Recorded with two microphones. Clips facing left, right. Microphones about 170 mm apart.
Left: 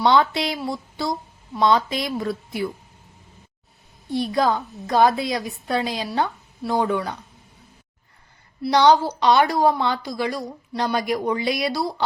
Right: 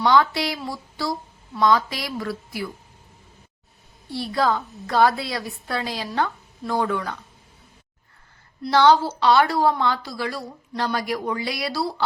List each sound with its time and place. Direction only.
0.0 s a woman's voice: 20° left (ahead or behind)
4.1 s a woman's voice: 20° left (ahead or behind)
8.6 s a woman's voice: 15° left (ahead or behind)